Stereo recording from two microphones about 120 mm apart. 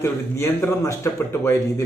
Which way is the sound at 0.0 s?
20° left (ahead or behind).